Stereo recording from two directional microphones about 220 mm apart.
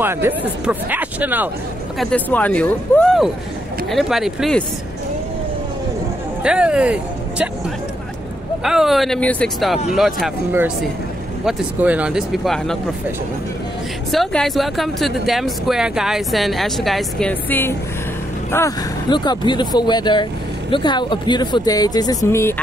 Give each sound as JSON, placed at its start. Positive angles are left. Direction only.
{"t": 0.0, "sound": "speech", "side_deg": -10}
{"t": 2.0, "sound": "speech", "side_deg": 5}
{"t": 6.4, "sound": "speech", "side_deg": -5}
{"t": 8.6, "sound": "speech", "side_deg": 0}
{"t": 14.1, "sound": "speech", "side_deg": 0}